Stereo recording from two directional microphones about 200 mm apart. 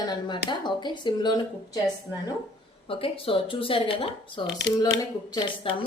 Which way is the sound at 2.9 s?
25° left (ahead or behind).